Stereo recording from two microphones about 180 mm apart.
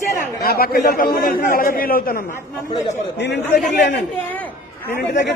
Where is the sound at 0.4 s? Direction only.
55° left (ahead or behind).